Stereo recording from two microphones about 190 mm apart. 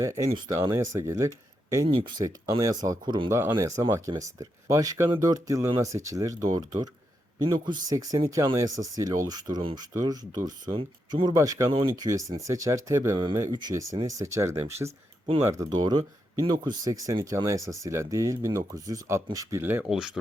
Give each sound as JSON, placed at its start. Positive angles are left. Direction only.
{"t": 0.0, "sound": "speech", "side_deg": -15}
{"t": 0.7, "sound": "speech", "side_deg": -15}
{"t": 1.9, "sound": "speech", "side_deg": -25}
{"t": 14.8, "sound": "speech", "side_deg": -30}
{"t": 15.4, "sound": "speech", "side_deg": -15}